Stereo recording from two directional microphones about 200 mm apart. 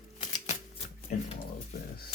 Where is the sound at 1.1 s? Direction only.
40° left (ahead or behind).